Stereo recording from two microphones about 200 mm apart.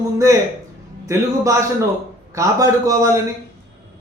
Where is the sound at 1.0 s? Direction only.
15° right (ahead or behind).